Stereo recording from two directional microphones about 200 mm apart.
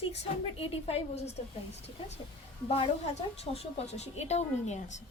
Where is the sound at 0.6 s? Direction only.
30° left (ahead or behind).